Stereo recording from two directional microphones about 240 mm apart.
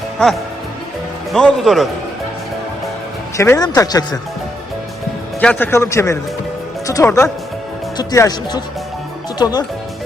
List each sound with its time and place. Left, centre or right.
1.3 s a man's voice: centre
3.3 s speech: centre
5.4 s speech: centre